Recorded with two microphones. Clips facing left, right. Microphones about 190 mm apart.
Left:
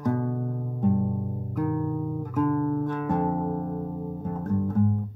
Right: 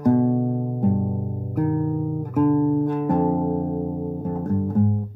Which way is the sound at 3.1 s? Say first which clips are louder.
Right 5 dB; 45° right (ahead or behind).